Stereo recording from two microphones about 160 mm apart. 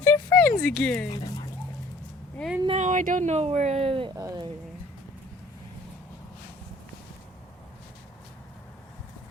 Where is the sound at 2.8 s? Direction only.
50° right (ahead or behind); by 4.1 s 35° right (ahead or behind).